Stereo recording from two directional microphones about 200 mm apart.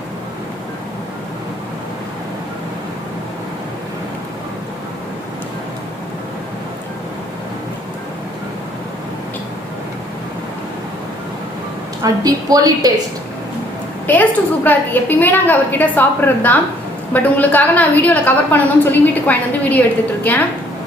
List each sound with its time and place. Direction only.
12.0 s a woman's voice: 20° right (ahead or behind)
14.1 s a woman's voice: 10° left (ahead or behind)